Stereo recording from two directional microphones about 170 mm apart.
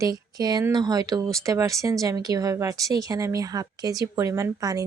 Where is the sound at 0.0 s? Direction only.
20° right (ahead or behind).